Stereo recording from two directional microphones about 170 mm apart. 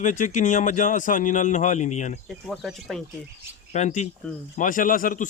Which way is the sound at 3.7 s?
45° left (ahead or behind).